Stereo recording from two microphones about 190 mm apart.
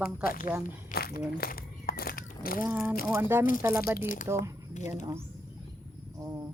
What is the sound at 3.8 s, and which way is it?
Speech, 50° left (ahead or behind).